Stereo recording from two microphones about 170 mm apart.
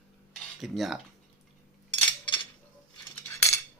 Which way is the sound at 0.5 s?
Centre (ahead or behind).